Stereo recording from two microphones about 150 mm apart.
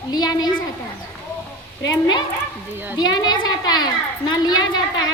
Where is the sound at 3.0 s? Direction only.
25° left (ahead or behind).